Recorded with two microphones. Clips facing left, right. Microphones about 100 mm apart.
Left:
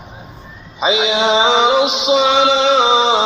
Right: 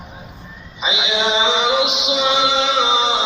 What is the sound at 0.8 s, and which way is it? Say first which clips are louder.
Mantra: left 6 dB; 40° left (ahead or behind).